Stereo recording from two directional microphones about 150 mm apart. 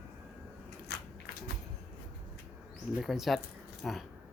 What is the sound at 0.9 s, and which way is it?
Biting, 90° left.